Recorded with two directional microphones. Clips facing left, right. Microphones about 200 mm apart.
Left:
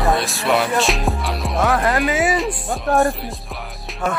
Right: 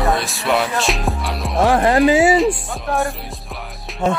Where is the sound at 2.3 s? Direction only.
Centre (ahead or behind).